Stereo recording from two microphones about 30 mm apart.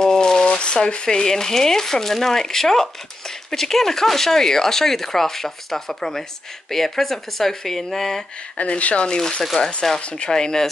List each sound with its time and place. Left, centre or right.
0.0 s shuffling cards: centre
0.5 s a sound: left
1.0 s speech: centre
8.5 s speech: left
9.6 s speech: left
10.3 s speech: centre